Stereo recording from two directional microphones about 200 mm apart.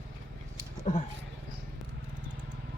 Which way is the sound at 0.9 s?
35° left (ahead or behind).